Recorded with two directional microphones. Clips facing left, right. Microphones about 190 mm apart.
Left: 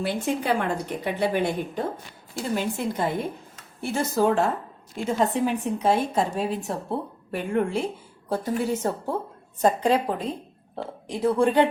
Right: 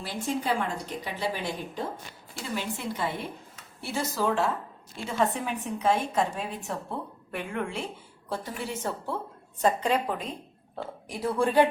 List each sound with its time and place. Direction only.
0.0 s speech: 65° left (ahead or behind)
2.3 s a woman's voice: 45° left (ahead or behind)
5.1 s a woman's voice: 30° left (ahead or behind)
11.1 s speech: 20° left (ahead or behind)